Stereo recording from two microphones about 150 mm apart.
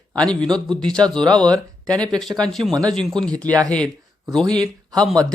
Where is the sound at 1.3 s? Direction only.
25° right (ahead or behind).